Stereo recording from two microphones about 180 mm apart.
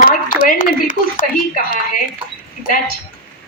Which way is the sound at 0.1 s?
45° left (ahead or behind).